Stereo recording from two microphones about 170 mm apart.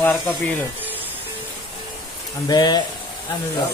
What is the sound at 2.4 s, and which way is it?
Speech, 25° left (ahead or behind).